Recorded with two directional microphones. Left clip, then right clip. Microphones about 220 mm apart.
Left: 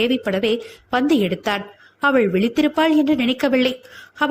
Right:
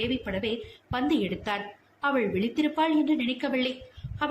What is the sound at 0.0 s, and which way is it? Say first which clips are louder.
A woman's voice: left 10 dB; 30° left (ahead or behind).